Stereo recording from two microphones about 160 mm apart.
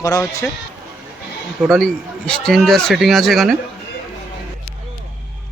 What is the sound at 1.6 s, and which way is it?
Speech, 5° left (ahead or behind).